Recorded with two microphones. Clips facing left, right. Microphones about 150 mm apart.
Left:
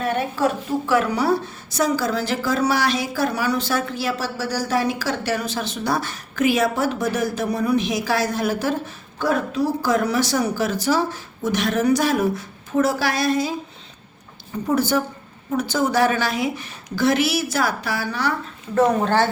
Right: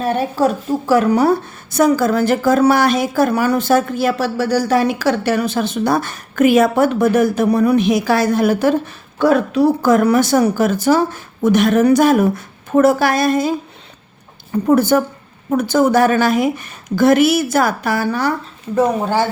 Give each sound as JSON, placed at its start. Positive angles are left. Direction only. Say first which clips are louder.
{"t": 0.0, "sound": "a woman's voice", "louder": "right 5 dB", "side_deg": -35}
{"t": 14.7, "sound": "a woman's voice", "louder": "right 7 dB", "side_deg": -55}
{"t": 18.7, "sound": "speech", "louder": "right 2 dB", "side_deg": -10}